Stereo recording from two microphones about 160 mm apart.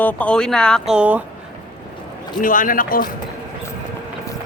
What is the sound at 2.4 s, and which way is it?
Speech, 60° left (ahead or behind).